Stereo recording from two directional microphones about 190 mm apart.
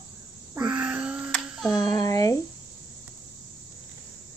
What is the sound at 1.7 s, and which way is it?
Speech, 20° left (ahead or behind).